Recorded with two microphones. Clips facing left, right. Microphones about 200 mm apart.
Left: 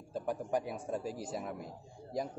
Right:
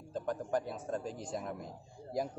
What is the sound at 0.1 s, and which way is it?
A man's voice, 10° left (ahead or behind).